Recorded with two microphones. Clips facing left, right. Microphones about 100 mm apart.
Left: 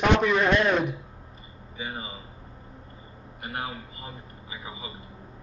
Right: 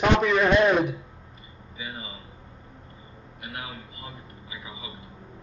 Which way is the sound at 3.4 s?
45° left (ahead or behind).